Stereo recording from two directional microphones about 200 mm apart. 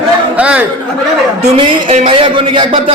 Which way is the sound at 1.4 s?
35° right (ahead or behind).